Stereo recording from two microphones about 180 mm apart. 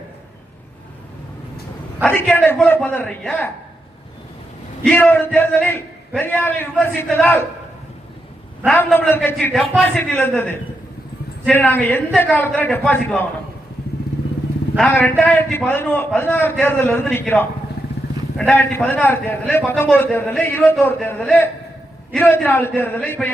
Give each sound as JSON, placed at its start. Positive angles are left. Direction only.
{"t": 2.0, "sound": "a man's voice", "side_deg": 5}
{"t": 4.9, "sound": "a man's voice", "side_deg": 10}
{"t": 8.6, "sound": "a man's voice", "side_deg": 10}
{"t": 14.8, "sound": "a man's voice", "side_deg": 5}